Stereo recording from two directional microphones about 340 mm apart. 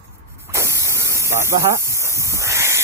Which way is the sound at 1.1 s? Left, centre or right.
Centre.